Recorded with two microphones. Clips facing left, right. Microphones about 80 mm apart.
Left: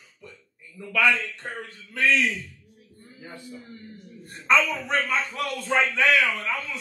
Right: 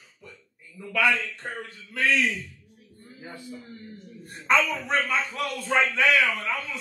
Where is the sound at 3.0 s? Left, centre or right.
Right.